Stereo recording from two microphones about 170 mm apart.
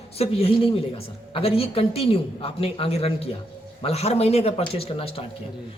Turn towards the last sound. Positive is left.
turn(degrees=35)  # may be behind; listen again after turning